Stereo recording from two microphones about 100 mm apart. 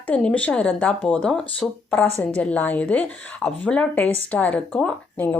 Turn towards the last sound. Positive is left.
turn(degrees=15)  # may be behind; listen again after turning